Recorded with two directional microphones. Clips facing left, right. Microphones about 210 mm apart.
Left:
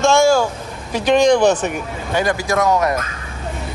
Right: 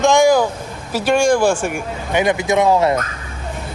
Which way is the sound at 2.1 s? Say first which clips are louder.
Right 2 dB; 20° right (ahead or behind).